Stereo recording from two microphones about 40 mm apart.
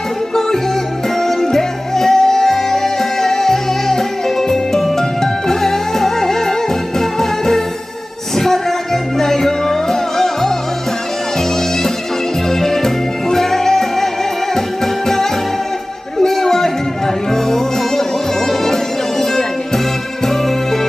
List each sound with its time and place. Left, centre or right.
0.3 s music: centre